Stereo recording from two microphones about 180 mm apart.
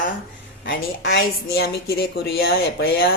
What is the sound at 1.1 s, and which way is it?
Speech, 60° left (ahead or behind).